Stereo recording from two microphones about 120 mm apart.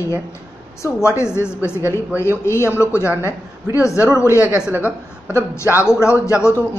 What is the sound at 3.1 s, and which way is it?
Speech, 20° right (ahead or behind).